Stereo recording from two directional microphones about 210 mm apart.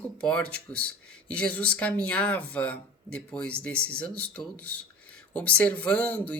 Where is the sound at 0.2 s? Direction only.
5° left (ahead or behind).